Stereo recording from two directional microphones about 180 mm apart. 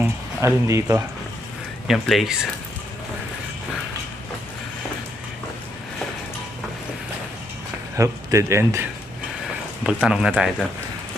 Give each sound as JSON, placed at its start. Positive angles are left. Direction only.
{"t": 0.0, "sound": "speech", "side_deg": -15}
{"t": 1.9, "sound": "speech", "side_deg": 0}
{"t": 7.9, "sound": "speech", "side_deg": -15}
{"t": 9.8, "sound": "speech", "side_deg": -5}